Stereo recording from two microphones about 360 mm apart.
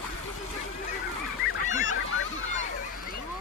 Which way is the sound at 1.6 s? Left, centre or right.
Left.